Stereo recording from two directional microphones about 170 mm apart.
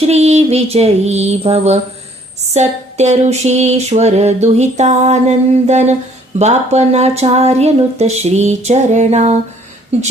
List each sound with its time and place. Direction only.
0.1 s speech: 40° right (ahead or behind)